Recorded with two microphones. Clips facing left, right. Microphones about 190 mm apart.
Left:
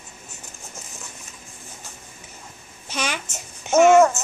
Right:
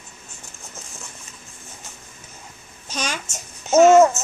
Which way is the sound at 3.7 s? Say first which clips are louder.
Right 2 dB; 10° left (ahead or behind).